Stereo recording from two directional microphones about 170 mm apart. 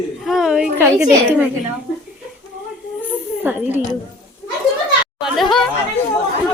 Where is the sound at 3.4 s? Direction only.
10° right (ahead or behind).